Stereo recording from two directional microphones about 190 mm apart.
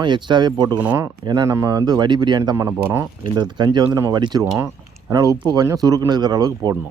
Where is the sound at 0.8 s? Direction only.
10° right (ahead or behind).